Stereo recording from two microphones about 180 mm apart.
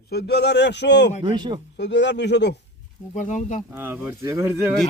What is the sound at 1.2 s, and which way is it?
Speech, 25° right (ahead or behind).